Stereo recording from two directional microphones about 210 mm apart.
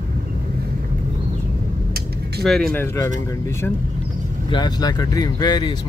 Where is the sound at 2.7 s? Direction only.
10° left (ahead or behind).